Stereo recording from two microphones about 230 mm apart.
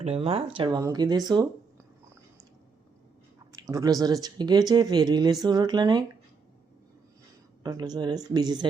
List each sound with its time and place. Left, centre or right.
0.0 s speech: right
3.5 s speech: centre
7.6 s speech: centre